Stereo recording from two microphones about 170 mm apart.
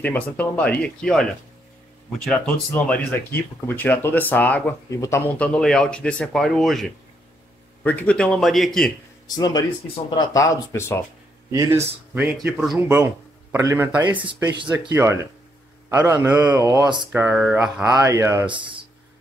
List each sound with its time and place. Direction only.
0.0 s a man's voice: 10° left (ahead or behind)
9.3 s speech: 20° left (ahead or behind)
11.5 s speech: 20° right (ahead or behind)
12.1 s a man's voice: 10° right (ahead or behind)
12.8 s a man's voice: 15° right (ahead or behind)
17.1 s a man's voice: 10° right (ahead or behind)
17.9 s speech: 20° right (ahead or behind)
18.5 s speech: 30° right (ahead or behind)